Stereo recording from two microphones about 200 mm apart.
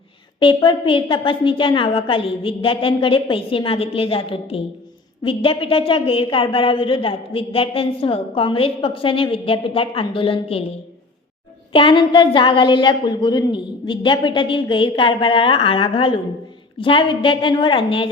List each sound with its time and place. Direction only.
0.3 s a woman's voice: 25° left (ahead or behind)
11.7 s a woman's voice: 25° left (ahead or behind)